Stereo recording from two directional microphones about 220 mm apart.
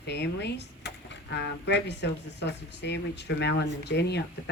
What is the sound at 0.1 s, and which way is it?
Speech, 50° left (ahead or behind).